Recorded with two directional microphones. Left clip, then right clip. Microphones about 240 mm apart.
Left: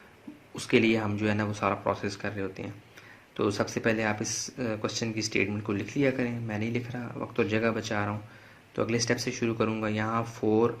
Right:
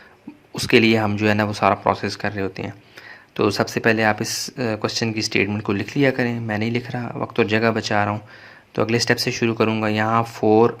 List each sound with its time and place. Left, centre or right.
0.5 s speech: right